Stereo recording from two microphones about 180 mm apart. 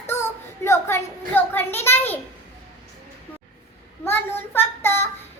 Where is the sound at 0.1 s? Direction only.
15° left (ahead or behind).